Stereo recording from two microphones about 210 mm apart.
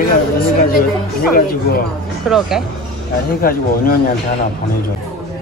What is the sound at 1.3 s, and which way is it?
Speech, 45° left (ahead or behind).